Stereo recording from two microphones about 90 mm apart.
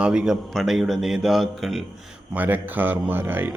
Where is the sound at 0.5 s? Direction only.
5° right (ahead or behind).